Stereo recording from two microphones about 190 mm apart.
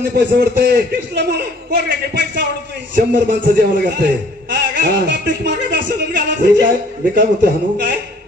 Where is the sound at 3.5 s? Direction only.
55° right (ahead or behind).